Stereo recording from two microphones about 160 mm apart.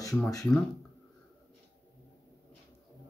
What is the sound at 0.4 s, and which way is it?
Speech, centre (ahead or behind).